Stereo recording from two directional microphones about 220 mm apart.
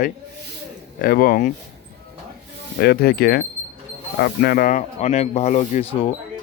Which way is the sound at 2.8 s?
45° left (ahead or behind).